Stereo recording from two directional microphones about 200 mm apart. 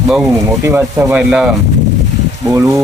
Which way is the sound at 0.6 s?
10° right (ahead or behind).